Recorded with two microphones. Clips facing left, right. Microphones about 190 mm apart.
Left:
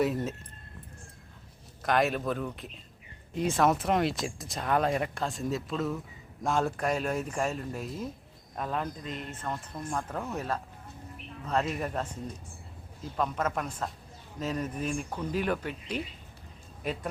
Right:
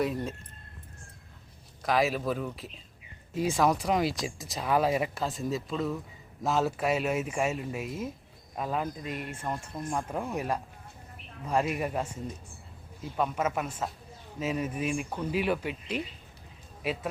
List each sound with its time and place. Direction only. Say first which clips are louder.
0.0 s speech: left 2 dB; centre (ahead or behind)
1.8 s speech: even; centre (ahead or behind)